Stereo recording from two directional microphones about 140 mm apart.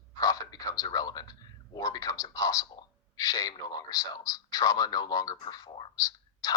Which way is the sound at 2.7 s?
25° left (ahead or behind).